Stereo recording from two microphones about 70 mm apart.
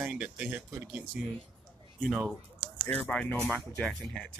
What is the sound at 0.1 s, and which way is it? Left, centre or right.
Speech, centre.